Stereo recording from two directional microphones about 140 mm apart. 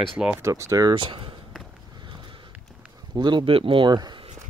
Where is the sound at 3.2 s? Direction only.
35° right (ahead or behind).